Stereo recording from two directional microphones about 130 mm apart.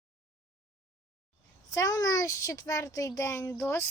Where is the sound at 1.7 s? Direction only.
30° left (ahead or behind).